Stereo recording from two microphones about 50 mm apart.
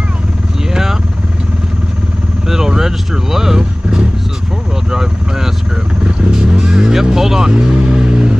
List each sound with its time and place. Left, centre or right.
0.7 s vehicle: centre
2.4 s vehicle: centre
6.3 s music: centre
7.6 s vehicle: centre